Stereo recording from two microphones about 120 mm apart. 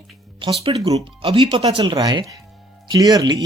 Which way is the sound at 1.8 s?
35° right (ahead or behind).